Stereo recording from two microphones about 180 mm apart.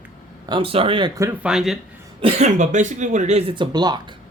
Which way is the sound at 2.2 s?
35° right (ahead or behind).